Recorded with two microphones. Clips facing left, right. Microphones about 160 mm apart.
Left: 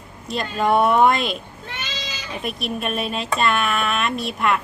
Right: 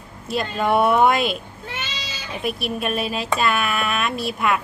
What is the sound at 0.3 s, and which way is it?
Speech, 5° right (ahead or behind).